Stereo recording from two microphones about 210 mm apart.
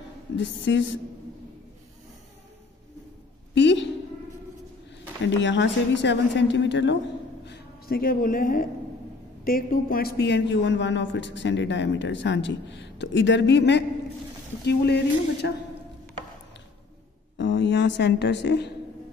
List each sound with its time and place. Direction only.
0.4 s a man's voice: 60° left (ahead or behind)
3.5 s a sound: 60° left (ahead or behind)
5.2 s a man's voice: 60° left (ahead or behind)
17.4 s a woman's voice: 55° left (ahead or behind)